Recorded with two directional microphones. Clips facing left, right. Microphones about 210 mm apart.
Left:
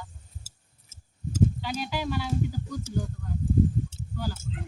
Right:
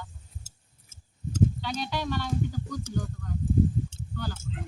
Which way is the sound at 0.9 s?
5° left (ahead or behind).